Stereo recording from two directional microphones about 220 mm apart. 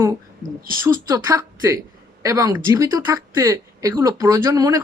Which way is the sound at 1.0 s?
15° right (ahead or behind).